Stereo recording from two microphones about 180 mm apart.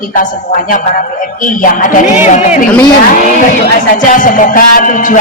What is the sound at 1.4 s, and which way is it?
Speech, 50° left (ahead or behind).